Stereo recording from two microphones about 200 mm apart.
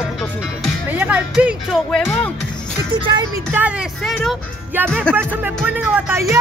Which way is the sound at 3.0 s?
20° right (ahead or behind).